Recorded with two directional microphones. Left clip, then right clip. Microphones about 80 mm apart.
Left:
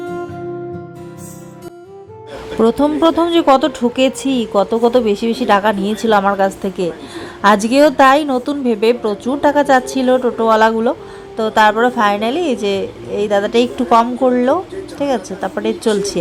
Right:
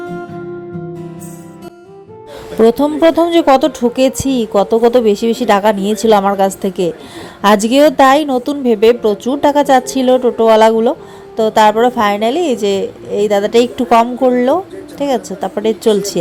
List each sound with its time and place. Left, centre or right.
0.0 s music: centre
2.6 s a woman's voice: right